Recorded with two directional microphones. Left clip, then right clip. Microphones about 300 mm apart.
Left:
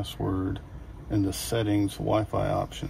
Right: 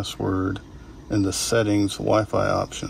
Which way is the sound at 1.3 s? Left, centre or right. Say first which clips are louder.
Right 10 dB; centre.